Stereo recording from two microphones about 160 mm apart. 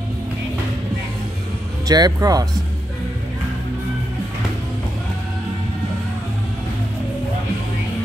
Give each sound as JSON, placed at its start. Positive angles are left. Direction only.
{"t": 1.9, "sound": "speech", "side_deg": -25}